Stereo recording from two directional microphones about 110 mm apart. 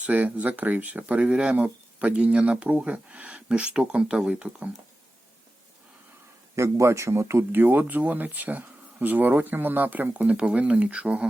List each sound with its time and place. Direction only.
0.0 s speech: 15° right (ahead or behind)
6.6 s speech: 25° right (ahead or behind); by 11.3 s 10° right (ahead or behind)